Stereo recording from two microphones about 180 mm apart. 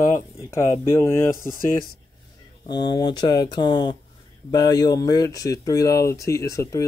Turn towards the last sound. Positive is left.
turn(degrees=15)  # may be behind; listen again after turning